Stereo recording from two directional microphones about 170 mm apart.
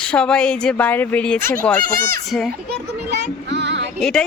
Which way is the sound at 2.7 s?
80° right.